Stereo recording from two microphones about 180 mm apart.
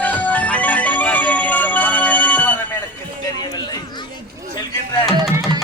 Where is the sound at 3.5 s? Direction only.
20° left (ahead or behind).